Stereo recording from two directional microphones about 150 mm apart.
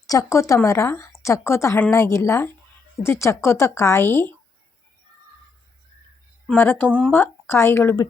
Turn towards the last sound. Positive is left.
turn(degrees=15)  # may be behind; listen again after turning